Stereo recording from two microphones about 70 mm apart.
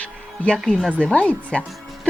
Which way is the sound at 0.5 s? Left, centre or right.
Centre.